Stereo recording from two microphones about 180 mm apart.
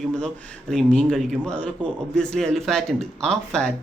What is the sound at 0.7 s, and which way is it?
A man's voice, 5° left (ahead or behind).